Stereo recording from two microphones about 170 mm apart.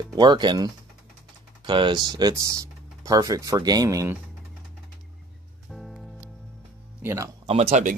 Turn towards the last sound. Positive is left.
turn(degrees=-40)  # may be behind; listen again after turning